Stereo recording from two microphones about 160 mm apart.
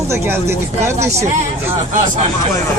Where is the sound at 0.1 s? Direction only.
15° right (ahead or behind).